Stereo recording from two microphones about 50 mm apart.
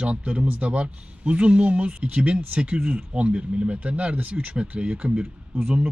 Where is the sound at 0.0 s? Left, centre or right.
Right.